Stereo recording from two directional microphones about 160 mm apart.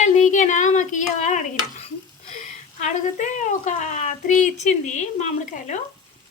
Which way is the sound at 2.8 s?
50° left (ahead or behind).